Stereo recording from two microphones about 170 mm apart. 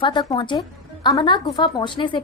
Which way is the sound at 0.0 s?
25° left (ahead or behind).